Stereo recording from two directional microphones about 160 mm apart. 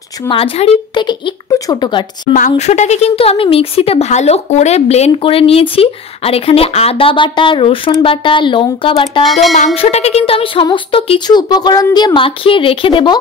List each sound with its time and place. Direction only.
0.3 s speech: 35° left (ahead or behind)
2.3 s speech: 50° left (ahead or behind); by 9.2 s 30° left (ahead or behind)
9.2 s music: centre (ahead or behind)
9.8 s speech: 40° left (ahead or behind)